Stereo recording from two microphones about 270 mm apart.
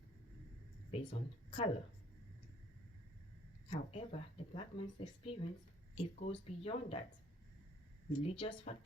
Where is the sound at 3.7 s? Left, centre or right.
Left.